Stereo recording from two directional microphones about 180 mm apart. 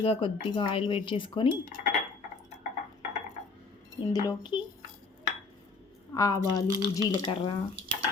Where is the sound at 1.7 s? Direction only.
45° left (ahead or behind).